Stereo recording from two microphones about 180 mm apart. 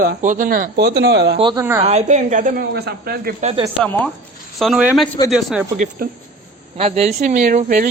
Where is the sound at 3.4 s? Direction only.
35° right (ahead or behind).